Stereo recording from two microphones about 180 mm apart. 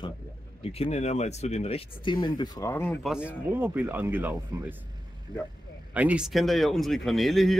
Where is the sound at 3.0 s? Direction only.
5° right (ahead or behind).